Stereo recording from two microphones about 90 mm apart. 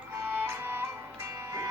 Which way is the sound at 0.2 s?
25° right (ahead or behind).